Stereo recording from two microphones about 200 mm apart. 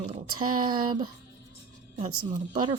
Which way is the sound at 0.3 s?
90° right.